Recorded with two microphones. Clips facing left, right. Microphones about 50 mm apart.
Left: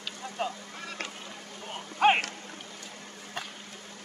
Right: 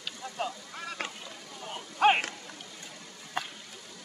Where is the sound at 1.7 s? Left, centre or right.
Centre.